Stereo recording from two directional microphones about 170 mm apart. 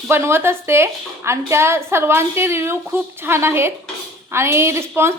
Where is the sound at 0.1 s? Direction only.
15° right (ahead or behind).